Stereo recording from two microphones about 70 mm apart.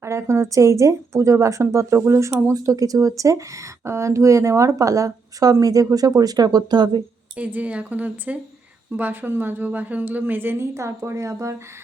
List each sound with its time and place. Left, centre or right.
0.0 s speech: right
7.3 s speech: right
10.8 s speech: right